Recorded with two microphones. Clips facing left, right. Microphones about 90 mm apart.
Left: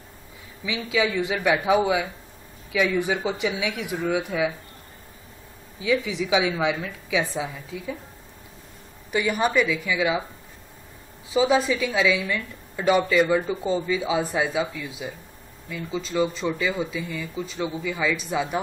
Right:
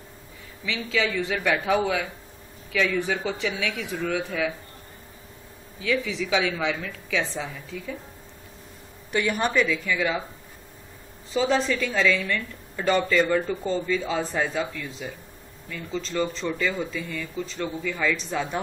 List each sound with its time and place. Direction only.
0.7 s speech: 15° left (ahead or behind)
5.8 s speech: 15° left (ahead or behind)
9.1 s speech: 5° left (ahead or behind)
11.2 s speech: 10° left (ahead or behind)